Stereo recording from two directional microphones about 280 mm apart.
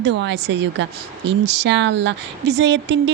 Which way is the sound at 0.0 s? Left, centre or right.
Right.